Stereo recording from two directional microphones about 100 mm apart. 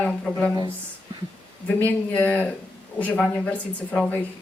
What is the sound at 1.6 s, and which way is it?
Speech, 15° left (ahead or behind).